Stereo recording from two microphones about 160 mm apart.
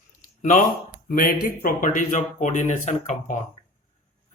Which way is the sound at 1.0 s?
65° left (ahead or behind).